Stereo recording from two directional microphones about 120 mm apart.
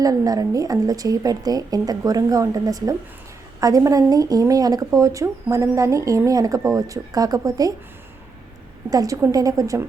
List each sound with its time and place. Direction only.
0.0 s a woman's voice: 30° right (ahead or behind)
8.9 s speech: 30° right (ahead or behind)